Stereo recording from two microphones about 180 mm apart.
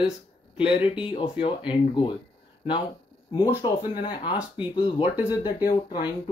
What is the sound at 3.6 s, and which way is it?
Speech, 25° left (ahead or behind).